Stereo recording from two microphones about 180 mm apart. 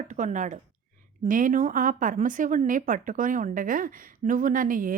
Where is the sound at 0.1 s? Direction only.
45° right (ahead or behind).